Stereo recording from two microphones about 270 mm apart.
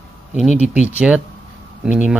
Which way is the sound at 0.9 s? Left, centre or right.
Centre.